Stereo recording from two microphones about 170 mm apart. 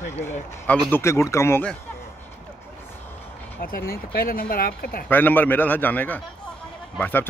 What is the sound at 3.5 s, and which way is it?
Speech, 60° left (ahead or behind).